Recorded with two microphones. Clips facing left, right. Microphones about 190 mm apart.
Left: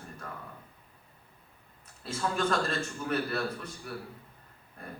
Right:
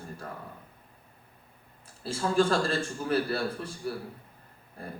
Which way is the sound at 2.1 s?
30° right (ahead or behind).